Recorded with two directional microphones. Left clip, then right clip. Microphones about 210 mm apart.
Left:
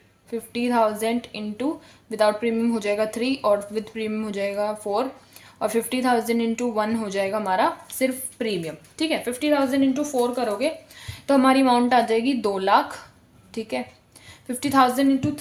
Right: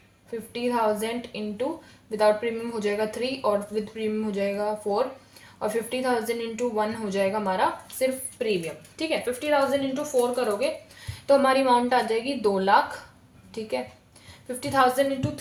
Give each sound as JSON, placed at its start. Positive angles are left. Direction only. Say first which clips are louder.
{"t": 0.5, "sound": "a woman's voice", "louder": "left 3 dB", "side_deg": 45}